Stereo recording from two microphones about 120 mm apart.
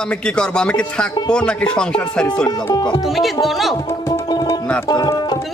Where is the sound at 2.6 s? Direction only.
35° left (ahead or behind).